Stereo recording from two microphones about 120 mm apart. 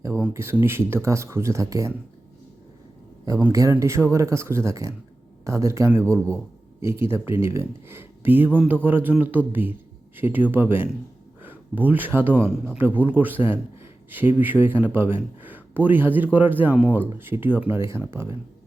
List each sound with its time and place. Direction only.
0.3 s speech: 20° right (ahead or behind)
3.5 s speech: 25° right (ahead or behind)